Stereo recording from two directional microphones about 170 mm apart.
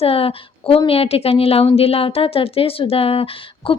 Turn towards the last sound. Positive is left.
turn(degrees=30)  # may be behind; listen again after turning